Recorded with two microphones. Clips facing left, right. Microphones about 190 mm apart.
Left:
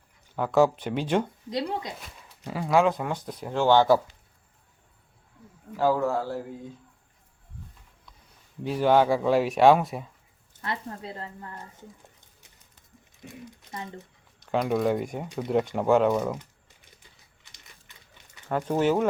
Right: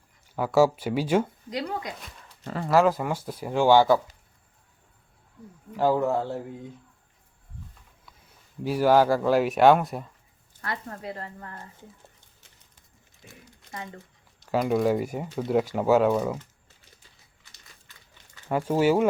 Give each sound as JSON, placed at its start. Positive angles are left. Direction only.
{"t": 0.3, "sound": "speech", "side_deg": -5}
{"t": 1.5, "sound": "speech", "side_deg": 25}
{"t": 2.4, "sound": "speech", "side_deg": 10}
{"t": 2.6, "sound": "speech", "side_deg": 0}
{"t": 5.7, "sound": "speech", "side_deg": -15}
{"t": 8.6, "sound": "speech", "side_deg": -5}
{"t": 10.6, "sound": "speech", "side_deg": 25}
{"t": 13.2, "sound": "speech", "side_deg": 20}
{"t": 14.5, "sound": "speech", "side_deg": -5}
{"t": 18.4, "sound": "speech", "side_deg": -5}